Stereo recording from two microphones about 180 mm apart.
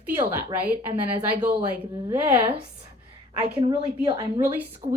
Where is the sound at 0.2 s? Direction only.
10° right (ahead or behind).